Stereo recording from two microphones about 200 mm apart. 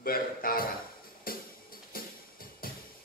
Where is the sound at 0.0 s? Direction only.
45° left (ahead or behind).